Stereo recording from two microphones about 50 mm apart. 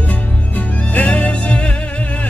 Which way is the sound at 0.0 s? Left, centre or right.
Left.